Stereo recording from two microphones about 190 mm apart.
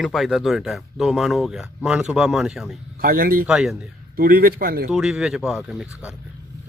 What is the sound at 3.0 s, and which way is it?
Speech, 50° right (ahead or behind).